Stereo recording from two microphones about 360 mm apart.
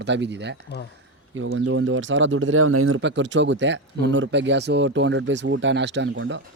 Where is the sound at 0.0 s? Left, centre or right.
Right.